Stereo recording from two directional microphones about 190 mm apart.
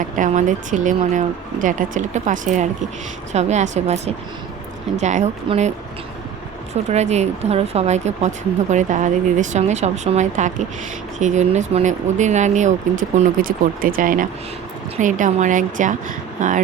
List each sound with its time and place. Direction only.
0.0 s speech: 40° right (ahead or behind)
6.9 s speech: 35° right (ahead or behind)